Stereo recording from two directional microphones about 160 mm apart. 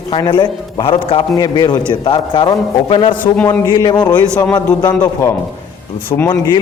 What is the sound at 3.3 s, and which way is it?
Speech, 10° left (ahead or behind).